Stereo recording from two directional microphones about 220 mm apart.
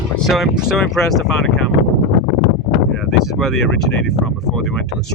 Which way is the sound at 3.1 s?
Centre (ahead or behind).